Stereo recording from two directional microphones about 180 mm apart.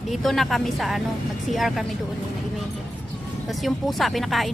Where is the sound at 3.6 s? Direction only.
Centre (ahead or behind).